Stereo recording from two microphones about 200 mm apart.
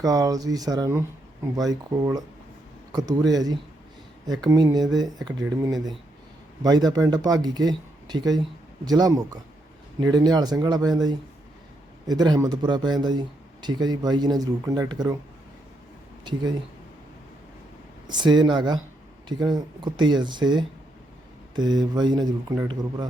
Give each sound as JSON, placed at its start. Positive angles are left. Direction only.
{"t": 0.0, "sound": "a man's voice", "side_deg": -15}
{"t": 6.6, "sound": "a man's voice", "side_deg": -20}
{"t": 18.1, "sound": "a man's voice", "side_deg": -20}